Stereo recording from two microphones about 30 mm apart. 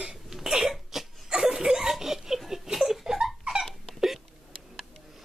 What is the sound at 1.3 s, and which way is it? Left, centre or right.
Laughter, right.